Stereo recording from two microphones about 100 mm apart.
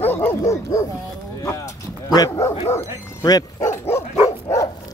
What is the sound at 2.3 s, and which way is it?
Dog, 30° left (ahead or behind).